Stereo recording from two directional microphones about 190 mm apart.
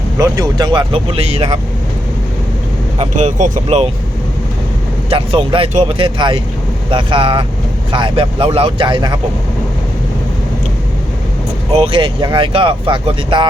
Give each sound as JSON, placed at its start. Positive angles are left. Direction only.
{"t": 0.2, "sound": "speech", "side_deg": -20}
{"t": 3.0, "sound": "speech", "side_deg": -35}
{"t": 5.0, "sound": "speech", "side_deg": -30}
{"t": 11.7, "sound": "speech", "side_deg": -30}